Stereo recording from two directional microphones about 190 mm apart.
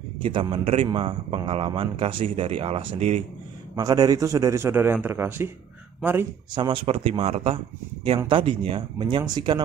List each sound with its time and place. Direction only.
0.2 s a man's voice: 30° right (ahead or behind)
3.7 s speech: 20° right (ahead or behind)
6.5 s a man's voice: 25° right (ahead or behind)